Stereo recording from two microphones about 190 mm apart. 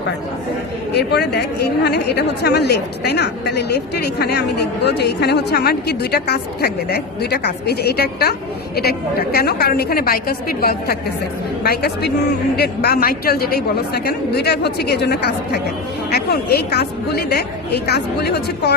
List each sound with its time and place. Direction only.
0.9 s a woman's voice: 60° left (ahead or behind)